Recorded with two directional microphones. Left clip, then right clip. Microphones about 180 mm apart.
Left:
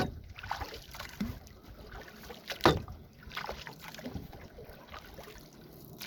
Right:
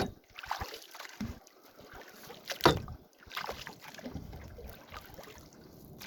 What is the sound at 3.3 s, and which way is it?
Boat, 45° right (ahead or behind).